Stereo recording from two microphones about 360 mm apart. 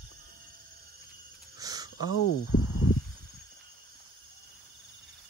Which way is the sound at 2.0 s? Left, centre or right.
Left.